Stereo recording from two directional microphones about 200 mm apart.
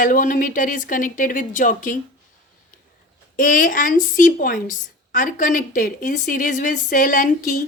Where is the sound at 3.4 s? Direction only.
40° left (ahead or behind).